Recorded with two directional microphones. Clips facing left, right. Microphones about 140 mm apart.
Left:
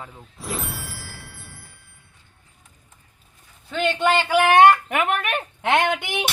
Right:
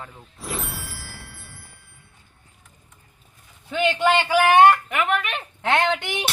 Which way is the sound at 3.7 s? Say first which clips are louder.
Right 1 dB; 10° right (ahead or behind).